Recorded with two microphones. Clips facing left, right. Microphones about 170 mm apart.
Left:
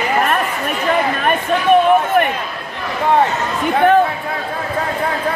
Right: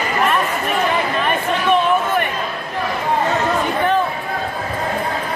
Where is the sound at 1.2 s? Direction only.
50° left (ahead or behind).